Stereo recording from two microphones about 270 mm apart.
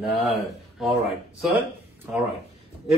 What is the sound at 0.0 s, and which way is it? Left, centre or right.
Speech, centre.